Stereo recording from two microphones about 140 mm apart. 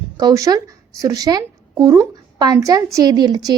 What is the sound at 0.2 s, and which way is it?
Speech, 25° right (ahead or behind).